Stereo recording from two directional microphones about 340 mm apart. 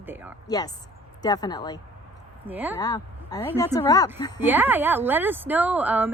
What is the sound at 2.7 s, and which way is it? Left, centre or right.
Speech, centre.